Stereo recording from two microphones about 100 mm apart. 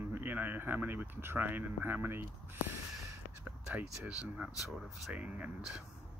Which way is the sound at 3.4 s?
15° right (ahead or behind).